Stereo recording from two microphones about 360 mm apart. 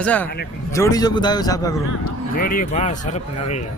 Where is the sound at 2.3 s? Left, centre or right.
Left.